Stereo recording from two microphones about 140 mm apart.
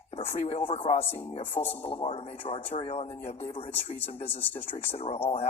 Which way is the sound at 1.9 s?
40° left (ahead or behind).